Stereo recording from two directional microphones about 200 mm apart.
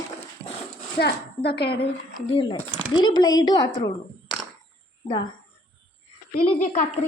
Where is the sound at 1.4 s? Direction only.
55° left (ahead or behind).